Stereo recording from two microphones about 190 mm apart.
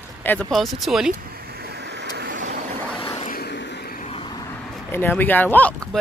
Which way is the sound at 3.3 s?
60° left (ahead or behind).